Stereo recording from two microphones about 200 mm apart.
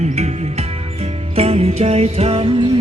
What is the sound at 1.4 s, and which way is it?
Music, 30° right (ahead or behind).